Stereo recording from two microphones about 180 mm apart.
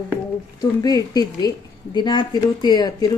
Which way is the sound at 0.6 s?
20° left (ahead or behind).